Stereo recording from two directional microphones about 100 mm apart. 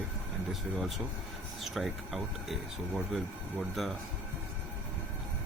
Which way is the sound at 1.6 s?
Centre (ahead or behind).